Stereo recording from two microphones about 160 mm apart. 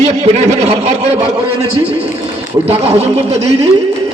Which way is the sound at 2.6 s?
40° right (ahead or behind).